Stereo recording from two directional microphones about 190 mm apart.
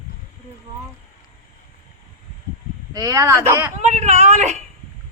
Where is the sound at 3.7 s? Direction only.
40° right (ahead or behind).